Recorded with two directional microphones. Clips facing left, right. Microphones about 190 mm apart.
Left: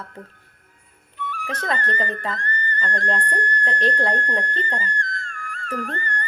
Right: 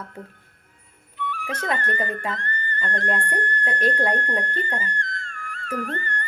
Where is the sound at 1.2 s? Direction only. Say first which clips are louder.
Even; 40° left (ahead or behind).